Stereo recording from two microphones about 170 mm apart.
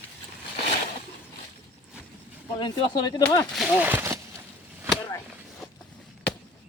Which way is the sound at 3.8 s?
10° right (ahead or behind).